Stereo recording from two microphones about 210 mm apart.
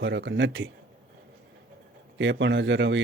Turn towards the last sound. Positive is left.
turn(degrees=-60)  # may be behind; listen again after turning